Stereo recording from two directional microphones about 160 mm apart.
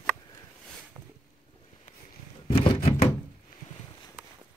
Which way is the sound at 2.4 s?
35° left (ahead or behind).